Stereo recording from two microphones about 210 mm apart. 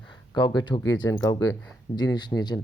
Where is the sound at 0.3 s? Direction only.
20° left (ahead or behind).